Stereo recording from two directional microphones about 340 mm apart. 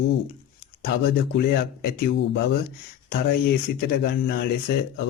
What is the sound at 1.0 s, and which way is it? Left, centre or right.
Speech, left.